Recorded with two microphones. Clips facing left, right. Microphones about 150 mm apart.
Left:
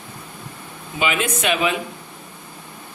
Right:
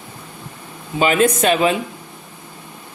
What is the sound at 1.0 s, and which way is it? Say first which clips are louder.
Speech: right 7 dB; 40° right (ahead or behind).